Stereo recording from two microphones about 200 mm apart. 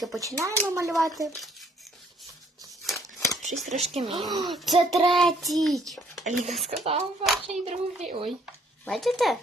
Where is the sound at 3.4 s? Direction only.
35° right (ahead or behind).